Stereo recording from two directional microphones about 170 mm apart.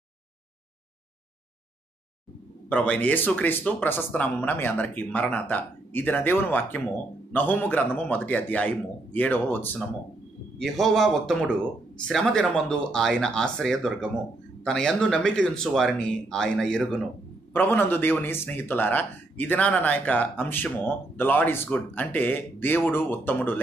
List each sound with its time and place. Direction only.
2.7 s a man's voice: 10° left (ahead or behind)